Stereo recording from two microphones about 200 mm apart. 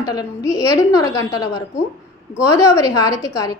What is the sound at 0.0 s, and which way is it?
A woman's voice, 20° left (ahead or behind).